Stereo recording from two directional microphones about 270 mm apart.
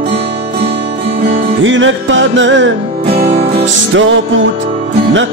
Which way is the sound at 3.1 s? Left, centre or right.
Right.